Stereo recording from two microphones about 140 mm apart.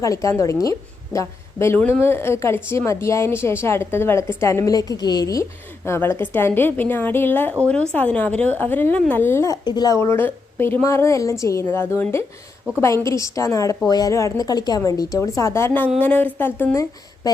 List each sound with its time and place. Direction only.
0.0 s a woman's voice: 25° left (ahead or behind)